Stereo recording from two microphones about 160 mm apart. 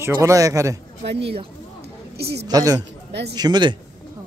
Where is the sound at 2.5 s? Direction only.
20° right (ahead or behind).